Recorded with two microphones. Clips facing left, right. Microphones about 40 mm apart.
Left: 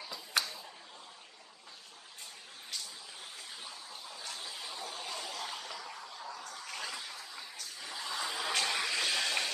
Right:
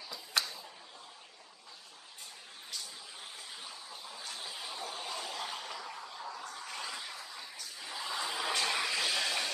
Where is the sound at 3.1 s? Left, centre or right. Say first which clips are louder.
Even; centre.